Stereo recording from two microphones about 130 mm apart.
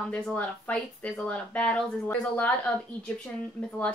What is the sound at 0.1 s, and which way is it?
Speech, 10° left (ahead or behind).